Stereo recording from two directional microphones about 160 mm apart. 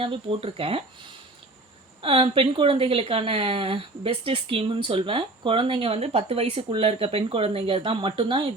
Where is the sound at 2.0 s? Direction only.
35° right (ahead or behind).